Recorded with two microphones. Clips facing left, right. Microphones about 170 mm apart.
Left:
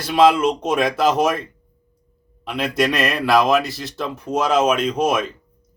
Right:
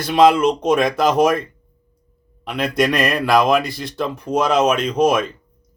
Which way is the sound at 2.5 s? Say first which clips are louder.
Right 2 dB; 5° left (ahead or behind).